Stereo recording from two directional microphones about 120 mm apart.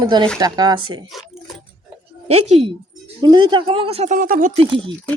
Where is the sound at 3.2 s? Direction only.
40° right (ahead or behind).